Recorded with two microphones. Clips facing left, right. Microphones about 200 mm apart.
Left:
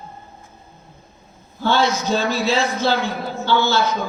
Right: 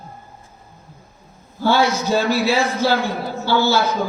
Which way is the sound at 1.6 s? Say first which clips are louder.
Right 2 dB; 10° right (ahead or behind).